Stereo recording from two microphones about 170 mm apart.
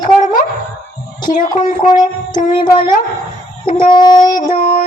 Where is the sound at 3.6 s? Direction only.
50° left (ahead or behind).